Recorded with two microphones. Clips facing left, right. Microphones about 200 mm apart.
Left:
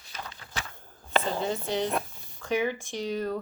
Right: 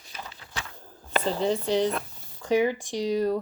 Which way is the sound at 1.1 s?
40° right (ahead or behind).